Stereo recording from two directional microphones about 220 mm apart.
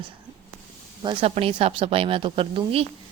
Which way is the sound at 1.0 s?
25° right (ahead or behind).